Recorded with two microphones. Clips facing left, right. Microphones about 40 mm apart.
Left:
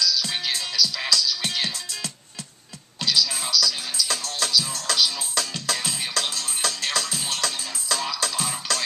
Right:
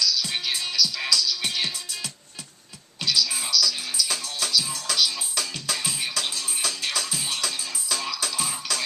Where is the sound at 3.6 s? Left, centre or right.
Left.